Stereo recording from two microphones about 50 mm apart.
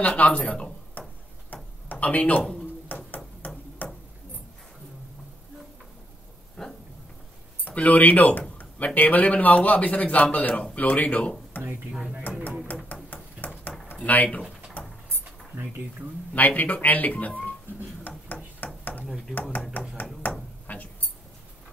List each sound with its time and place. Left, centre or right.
0.0 s speech: left
1.5 s a sound: left
3.8 s tick-tock: left
6.6 s dog: centre
7.6 s speech: left
13.1 s a sound: left
14.0 s speech: left
14.8 s rodents: left
16.3 s speech: left
18.0 s ping: left
19.0 s speech: centre
19.7 s a sound: left